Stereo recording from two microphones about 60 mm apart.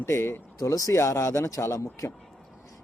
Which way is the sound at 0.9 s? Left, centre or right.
Left.